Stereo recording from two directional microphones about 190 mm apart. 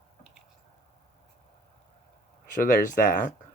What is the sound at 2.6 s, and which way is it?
Speech, 45° left (ahead or behind).